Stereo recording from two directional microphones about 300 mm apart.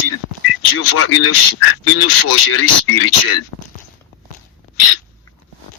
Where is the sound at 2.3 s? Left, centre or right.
Left.